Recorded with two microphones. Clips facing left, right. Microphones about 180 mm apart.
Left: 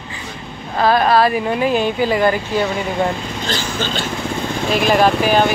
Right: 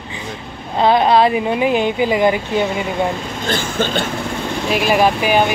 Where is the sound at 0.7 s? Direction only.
20° right (ahead or behind).